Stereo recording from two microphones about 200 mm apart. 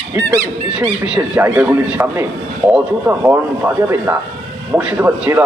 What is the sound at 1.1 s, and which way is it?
A man's voice, 5° right (ahead or behind).